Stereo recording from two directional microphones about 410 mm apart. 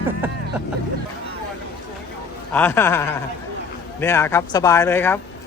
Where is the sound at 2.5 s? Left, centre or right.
Centre.